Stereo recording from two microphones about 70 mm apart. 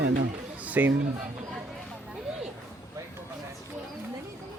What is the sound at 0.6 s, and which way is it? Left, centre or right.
Chatter, right.